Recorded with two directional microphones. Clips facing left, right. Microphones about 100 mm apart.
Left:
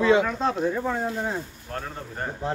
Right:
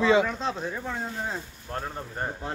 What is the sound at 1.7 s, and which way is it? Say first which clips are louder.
Speech: right 2 dB; 20° right (ahead or behind).